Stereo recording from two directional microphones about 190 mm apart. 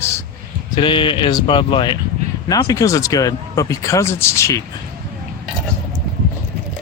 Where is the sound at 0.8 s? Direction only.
25° left (ahead or behind).